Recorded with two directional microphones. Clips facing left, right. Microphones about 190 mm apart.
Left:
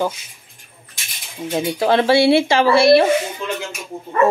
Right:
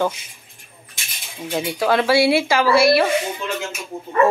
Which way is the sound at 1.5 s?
25° left (ahead or behind).